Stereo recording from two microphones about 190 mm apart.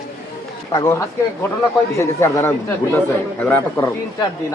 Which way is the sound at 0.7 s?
20° left (ahead or behind).